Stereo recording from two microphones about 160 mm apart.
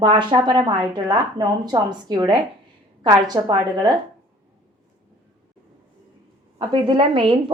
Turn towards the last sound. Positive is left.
turn(degrees=-30)  # may be behind; listen again after turning